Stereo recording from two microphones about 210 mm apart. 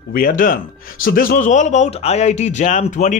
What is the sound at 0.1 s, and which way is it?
A man's voice, 40° left (ahead or behind).